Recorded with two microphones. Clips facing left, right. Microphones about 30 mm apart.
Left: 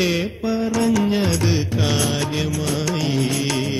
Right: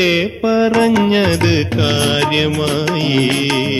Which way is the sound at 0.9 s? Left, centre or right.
Right.